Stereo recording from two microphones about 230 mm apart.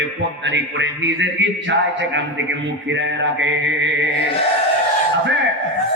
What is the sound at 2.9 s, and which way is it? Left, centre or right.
A man's voice, right.